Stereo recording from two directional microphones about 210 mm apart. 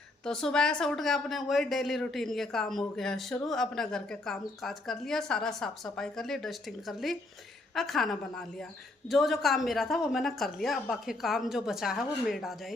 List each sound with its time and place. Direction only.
0.3 s a woman's voice: 5° left (ahead or behind)